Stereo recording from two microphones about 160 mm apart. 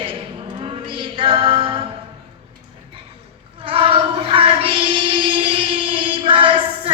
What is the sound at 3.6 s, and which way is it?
Child singing, 35° right (ahead or behind).